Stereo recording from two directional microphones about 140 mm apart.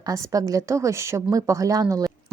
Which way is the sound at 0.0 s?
25° right (ahead or behind).